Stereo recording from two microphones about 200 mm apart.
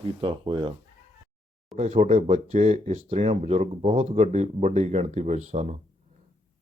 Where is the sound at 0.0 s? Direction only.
25° right (ahead or behind).